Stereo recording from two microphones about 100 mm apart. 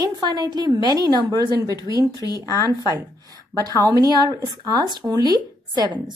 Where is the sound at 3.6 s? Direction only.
35° right (ahead or behind).